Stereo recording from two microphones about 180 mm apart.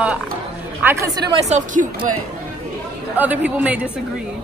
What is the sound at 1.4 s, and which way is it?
Speech, 40° right (ahead or behind).